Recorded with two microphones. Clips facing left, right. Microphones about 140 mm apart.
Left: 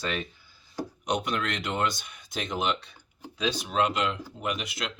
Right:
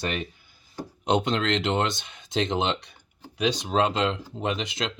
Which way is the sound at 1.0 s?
25° right (ahead or behind).